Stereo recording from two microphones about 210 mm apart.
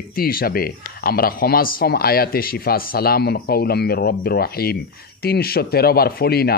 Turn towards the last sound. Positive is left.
turn(degrees=50)  # may be behind; listen again after turning